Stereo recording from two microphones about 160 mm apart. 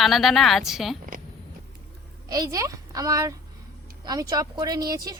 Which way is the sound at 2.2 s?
25° right (ahead or behind).